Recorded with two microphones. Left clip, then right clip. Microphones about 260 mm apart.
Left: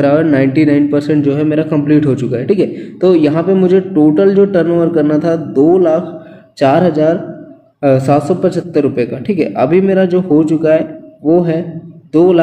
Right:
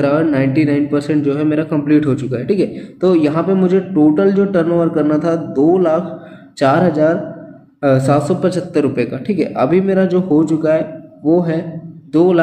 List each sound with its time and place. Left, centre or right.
0.0 s a man's voice: centre